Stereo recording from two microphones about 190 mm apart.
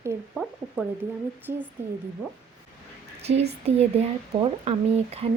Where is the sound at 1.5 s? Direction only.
50° right (ahead or behind).